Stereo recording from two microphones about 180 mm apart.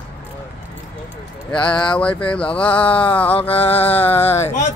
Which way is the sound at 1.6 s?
25° left (ahead or behind).